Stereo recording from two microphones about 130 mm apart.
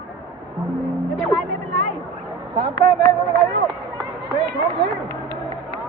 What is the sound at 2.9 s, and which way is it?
Speech, centre (ahead or behind).